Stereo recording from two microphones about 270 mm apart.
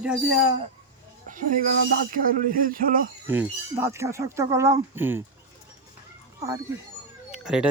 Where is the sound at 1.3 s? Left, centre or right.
Right.